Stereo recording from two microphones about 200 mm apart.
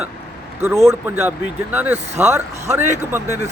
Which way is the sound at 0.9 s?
10° right (ahead or behind).